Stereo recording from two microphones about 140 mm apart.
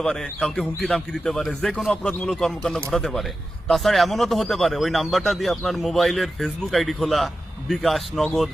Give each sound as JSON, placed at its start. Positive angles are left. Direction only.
{"t": 0.0, "sound": "speech", "side_deg": 5}